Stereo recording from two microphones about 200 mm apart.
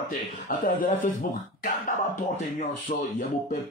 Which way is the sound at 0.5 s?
40° left (ahead or behind).